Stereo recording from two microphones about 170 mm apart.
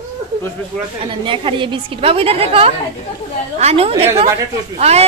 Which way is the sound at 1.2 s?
30° right (ahead or behind).